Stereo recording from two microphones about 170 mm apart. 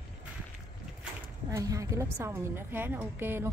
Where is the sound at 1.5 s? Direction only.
20° right (ahead or behind).